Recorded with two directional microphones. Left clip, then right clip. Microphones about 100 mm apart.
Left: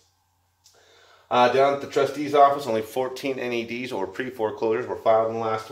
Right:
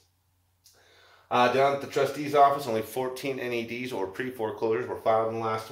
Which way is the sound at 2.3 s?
35° left (ahead or behind).